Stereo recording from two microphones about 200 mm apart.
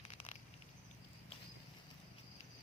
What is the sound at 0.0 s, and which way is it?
Patter, 30° left (ahead or behind).